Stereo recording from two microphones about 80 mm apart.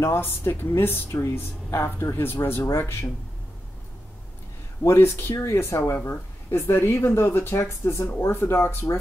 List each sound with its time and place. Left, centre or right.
0.0 s speech: left
4.8 s speech: left